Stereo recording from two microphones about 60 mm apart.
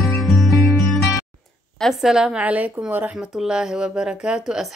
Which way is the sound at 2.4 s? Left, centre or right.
Right.